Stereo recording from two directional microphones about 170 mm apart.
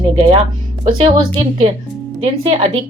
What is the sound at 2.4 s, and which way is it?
Speech, 30° right (ahead or behind).